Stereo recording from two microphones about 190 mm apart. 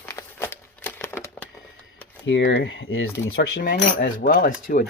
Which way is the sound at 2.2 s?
75° left (ahead or behind).